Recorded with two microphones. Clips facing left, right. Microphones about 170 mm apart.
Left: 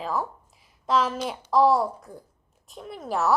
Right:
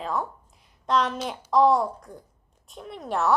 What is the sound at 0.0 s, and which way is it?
A woman's voice, centre (ahead or behind).